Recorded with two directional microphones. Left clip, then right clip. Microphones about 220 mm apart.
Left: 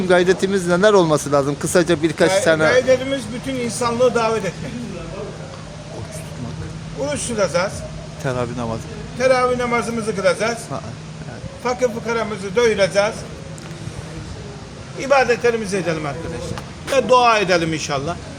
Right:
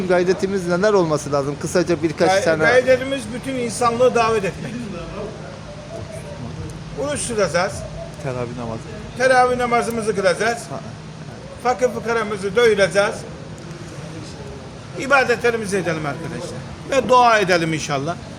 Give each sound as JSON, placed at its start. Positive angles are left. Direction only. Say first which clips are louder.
{"t": 0.1, "sound": "speech", "louder": "left 3 dB", "side_deg": 20}
{"t": 2.6, "sound": "a man's voice", "louder": "even", "side_deg": 0}
{"t": 7.0, "sound": "a man's voice", "louder": "even", "side_deg": -5}
{"t": 8.2, "sound": "speech", "louder": "left 4 dB", "side_deg": 30}
{"t": 9.1, "sound": "a man's voice", "louder": "right 1 dB", "side_deg": -5}
{"t": 11.6, "sound": "a man's voice", "louder": "right 1 dB", "side_deg": -5}
{"t": 14.9, "sound": "a man's voice", "louder": "left 1 dB", "side_deg": -5}